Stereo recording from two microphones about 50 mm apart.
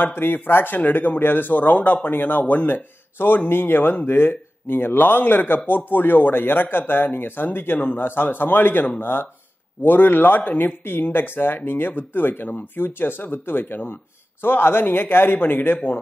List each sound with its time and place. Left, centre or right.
0.0 s speech: left
10.8 s speech: left